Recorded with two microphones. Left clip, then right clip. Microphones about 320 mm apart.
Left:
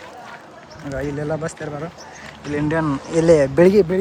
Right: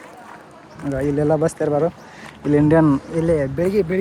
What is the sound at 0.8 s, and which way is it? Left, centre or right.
Speech, centre.